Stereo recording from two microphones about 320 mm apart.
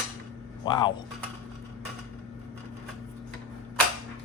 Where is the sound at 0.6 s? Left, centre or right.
Centre.